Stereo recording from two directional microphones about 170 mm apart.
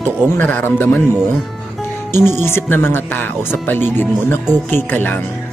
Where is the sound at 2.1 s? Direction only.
15° left (ahead or behind).